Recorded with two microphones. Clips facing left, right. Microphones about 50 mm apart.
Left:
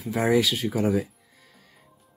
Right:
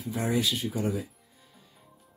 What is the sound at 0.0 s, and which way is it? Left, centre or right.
Speech, left.